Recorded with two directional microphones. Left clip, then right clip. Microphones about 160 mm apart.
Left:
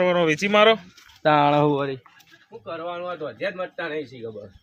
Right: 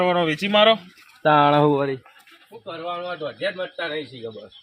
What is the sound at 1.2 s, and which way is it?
Speech, 45° right (ahead or behind).